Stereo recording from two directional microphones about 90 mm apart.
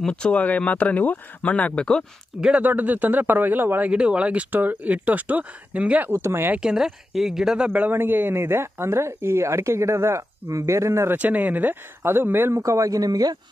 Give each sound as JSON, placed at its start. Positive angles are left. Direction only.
{"t": 0.0, "sound": "speech", "side_deg": 10}
{"t": 2.4, "sound": "speech", "side_deg": -15}
{"t": 6.1, "sound": "a man's voice", "side_deg": -25}
{"t": 6.6, "sound": "a man's voice", "side_deg": -5}
{"t": 11.1, "sound": "a man's voice", "side_deg": -15}